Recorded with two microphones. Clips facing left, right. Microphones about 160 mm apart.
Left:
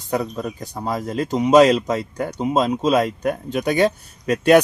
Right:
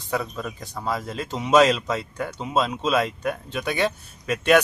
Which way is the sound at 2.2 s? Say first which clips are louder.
Left 7 dB; 20° left (ahead or behind).